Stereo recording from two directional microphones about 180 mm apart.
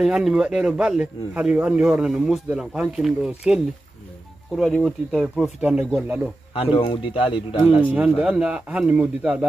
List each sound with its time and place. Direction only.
0.0 s speech: 5° right (ahead or behind)
6.5 s speech: 30° left (ahead or behind)
8.2 s speech: 5° right (ahead or behind)